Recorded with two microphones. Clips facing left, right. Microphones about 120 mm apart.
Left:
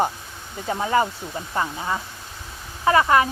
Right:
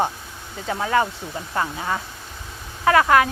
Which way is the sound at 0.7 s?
15° left (ahead or behind).